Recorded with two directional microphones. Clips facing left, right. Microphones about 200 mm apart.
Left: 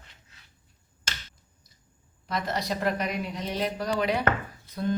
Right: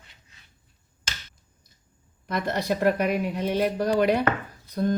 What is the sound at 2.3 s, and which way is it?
Speech, 55° right (ahead or behind).